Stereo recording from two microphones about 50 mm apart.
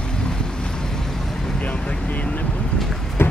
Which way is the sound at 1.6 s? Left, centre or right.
Left.